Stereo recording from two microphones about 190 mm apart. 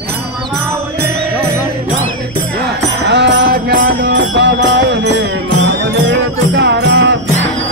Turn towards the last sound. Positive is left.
turn(degrees=-65)  # may be behind; listen again after turning